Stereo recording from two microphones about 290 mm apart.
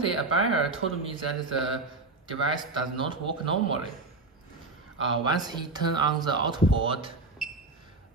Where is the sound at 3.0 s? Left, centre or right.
Centre.